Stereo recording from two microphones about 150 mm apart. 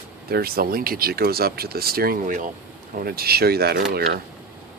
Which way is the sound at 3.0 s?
90° right.